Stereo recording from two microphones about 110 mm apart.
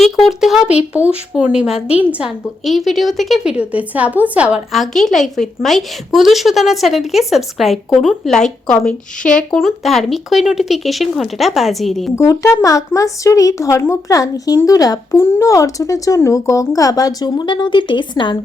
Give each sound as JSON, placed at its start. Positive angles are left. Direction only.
{"t": 0.0, "sound": "a woman's voice", "side_deg": 0}
{"t": 2.6, "sound": "a woman's voice", "side_deg": 0}
{"t": 4.7, "sound": "a woman's voice", "side_deg": 0}
{"t": 12.1, "sound": "speech", "side_deg": 30}